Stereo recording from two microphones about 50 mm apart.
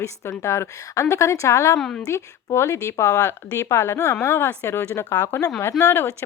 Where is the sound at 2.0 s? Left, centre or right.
Left.